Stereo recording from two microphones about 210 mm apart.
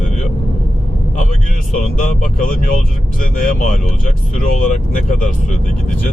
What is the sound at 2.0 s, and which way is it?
Speech, 40° left (ahead or behind).